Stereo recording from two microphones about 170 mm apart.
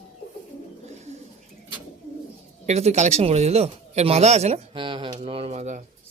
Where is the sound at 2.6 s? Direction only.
40° right (ahead or behind).